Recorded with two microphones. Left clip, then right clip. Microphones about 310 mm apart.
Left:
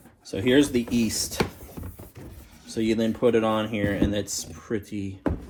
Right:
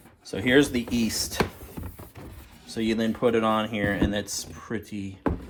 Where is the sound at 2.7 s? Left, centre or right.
Right.